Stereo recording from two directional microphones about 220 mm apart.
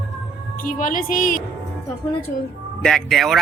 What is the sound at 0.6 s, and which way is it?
Speech, 40° left (ahead or behind).